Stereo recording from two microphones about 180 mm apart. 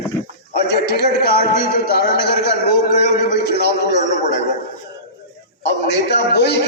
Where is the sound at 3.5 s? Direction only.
65° left (ahead or behind).